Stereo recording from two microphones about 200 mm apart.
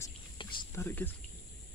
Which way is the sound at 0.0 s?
25° left (ahead or behind).